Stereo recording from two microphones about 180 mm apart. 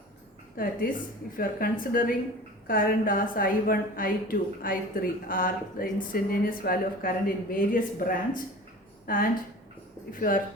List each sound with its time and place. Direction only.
0.5 s a woman's voice: 50° left (ahead or behind)